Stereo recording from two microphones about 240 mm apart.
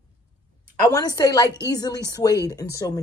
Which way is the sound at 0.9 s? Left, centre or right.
Centre.